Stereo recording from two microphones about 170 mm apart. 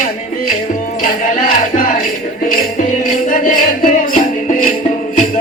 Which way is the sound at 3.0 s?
55° left (ahead or behind).